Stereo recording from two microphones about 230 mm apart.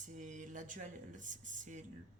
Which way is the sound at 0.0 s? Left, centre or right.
Right.